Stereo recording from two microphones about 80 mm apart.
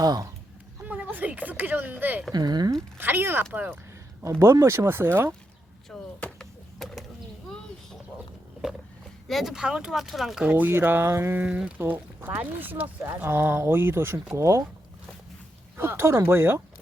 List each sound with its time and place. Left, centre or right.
0.0 s speech: right
0.9 s a sound: centre
2.3 s speech: right
3.0 s speech: right
4.2 s speech: right
5.9 s a sound: centre
9.2 s speech: centre
10.5 s speech: right
11.3 s speech: centre
11.8 s speech: right
15.8 s speech: right